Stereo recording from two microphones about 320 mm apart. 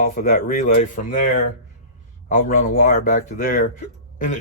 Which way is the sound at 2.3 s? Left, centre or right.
Left.